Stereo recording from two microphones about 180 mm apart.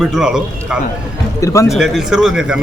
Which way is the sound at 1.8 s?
5° right (ahead or behind).